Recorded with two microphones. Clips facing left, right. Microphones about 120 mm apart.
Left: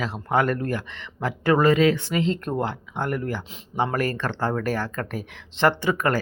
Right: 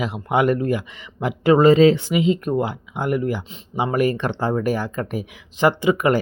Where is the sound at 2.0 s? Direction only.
10° right (ahead or behind).